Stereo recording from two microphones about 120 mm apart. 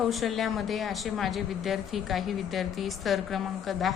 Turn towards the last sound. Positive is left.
turn(degrees=0)  # may be behind; listen again after turning